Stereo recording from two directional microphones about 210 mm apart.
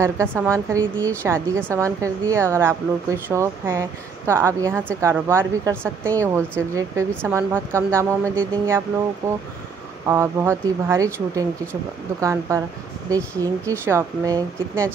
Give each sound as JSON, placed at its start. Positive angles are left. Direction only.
{"t": 0.0, "sound": "a woman's voice", "side_deg": -10}